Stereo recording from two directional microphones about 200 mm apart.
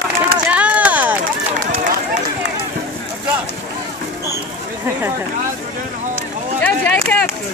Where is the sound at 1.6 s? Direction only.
45° right (ahead or behind).